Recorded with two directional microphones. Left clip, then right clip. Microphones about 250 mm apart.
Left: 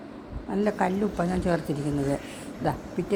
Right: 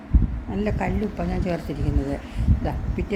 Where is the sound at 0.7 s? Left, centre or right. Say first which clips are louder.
Left 1 dB; centre.